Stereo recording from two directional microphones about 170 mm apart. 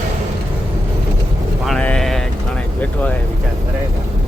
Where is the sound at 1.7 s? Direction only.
5° left (ahead or behind).